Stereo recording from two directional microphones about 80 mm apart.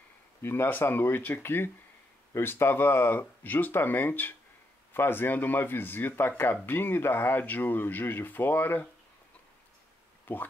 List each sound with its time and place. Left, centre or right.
0.4 s speech: left
10.3 s speech: left